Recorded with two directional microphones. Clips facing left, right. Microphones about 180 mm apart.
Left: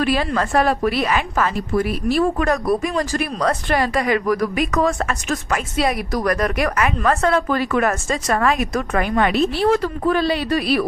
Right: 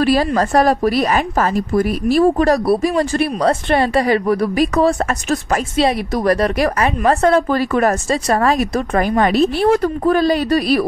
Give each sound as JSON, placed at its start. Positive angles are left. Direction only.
{"t": 0.0, "sound": "a woman's voice", "side_deg": -35}